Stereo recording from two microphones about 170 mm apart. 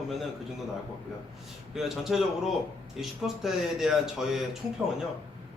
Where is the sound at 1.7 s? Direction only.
Centre (ahead or behind).